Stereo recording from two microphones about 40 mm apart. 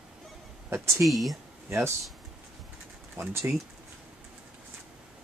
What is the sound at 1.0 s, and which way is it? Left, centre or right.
Speech, centre.